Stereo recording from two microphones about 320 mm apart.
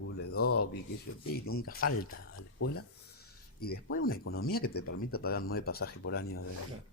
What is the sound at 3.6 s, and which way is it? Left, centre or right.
Speech, left.